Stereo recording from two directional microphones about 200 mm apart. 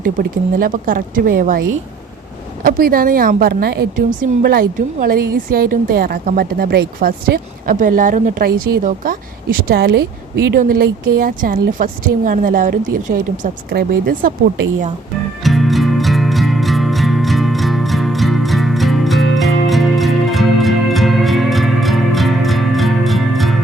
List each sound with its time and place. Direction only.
0.0 s a woman's voice: 45° right (ahead or behind)
2.6 s a woman's voice: 50° right (ahead or behind)
15.4 s music: centre (ahead or behind)